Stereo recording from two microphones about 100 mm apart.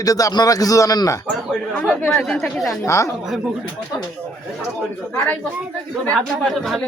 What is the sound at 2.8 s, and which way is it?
Speech, 30° left (ahead or behind).